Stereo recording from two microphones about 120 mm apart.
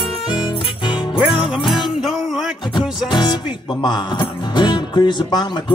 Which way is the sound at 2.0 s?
5° right (ahead or behind).